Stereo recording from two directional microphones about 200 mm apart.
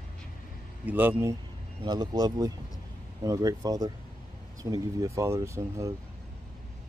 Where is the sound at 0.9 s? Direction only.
10° right (ahead or behind).